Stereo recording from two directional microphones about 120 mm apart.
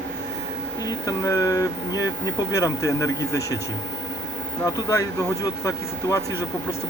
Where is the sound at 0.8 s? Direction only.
30° left (ahead or behind).